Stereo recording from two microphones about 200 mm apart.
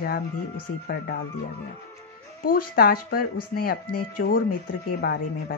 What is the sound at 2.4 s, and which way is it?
Speech, 45° left (ahead or behind).